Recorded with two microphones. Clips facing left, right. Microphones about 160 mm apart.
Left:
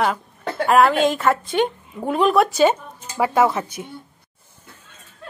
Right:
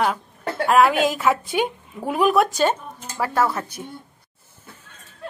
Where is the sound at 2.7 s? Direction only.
10° left (ahead or behind).